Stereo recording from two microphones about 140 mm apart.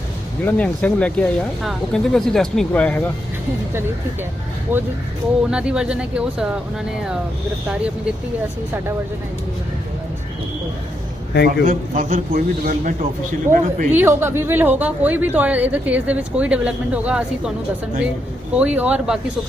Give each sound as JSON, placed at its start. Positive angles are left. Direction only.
{"t": 0.4, "sound": "speech", "side_deg": 10}
{"t": 4.7, "sound": "a woman's voice", "side_deg": -15}
{"t": 11.4, "sound": "a man's voice", "side_deg": -80}
{"t": 13.5, "sound": "speech", "side_deg": -65}
{"t": 13.9, "sound": "a woman's voice", "side_deg": -15}
{"t": 18.5, "sound": "a woman's voice", "side_deg": -10}